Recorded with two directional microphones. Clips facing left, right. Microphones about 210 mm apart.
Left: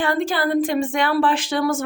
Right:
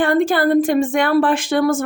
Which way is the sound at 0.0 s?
55° right (ahead or behind).